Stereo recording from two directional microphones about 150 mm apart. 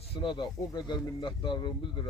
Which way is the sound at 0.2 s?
30° left (ahead or behind).